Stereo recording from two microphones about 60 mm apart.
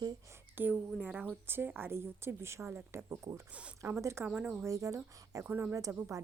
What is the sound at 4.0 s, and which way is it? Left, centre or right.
Speech, right.